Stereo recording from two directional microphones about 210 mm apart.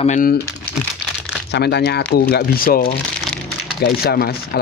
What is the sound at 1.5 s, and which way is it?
Speech, 50° left (ahead or behind).